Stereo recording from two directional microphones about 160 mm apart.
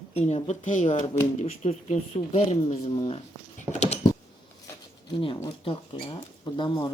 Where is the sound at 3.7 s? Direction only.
15° right (ahead or behind).